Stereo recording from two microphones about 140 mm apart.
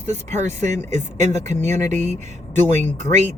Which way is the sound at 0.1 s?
55° right (ahead or behind).